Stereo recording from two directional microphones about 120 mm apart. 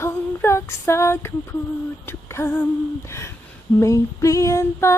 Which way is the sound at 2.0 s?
20° left (ahead or behind).